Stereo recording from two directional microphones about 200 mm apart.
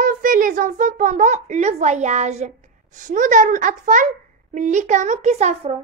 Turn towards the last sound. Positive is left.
turn(degrees=-35)  # may be behind; listen again after turning